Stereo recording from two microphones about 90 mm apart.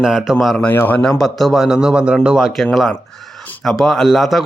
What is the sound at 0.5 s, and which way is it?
Speech, 15° left (ahead or behind).